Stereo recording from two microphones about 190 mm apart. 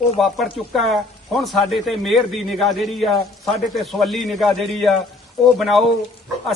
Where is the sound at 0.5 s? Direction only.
Centre (ahead or behind).